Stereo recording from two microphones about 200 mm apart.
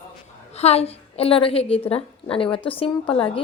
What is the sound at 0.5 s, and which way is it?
A woman's voice, 30° left (ahead or behind).